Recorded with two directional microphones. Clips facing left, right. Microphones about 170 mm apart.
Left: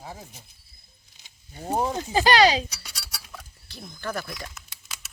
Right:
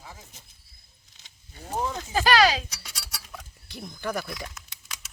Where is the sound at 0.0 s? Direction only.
35° left (ahead or behind).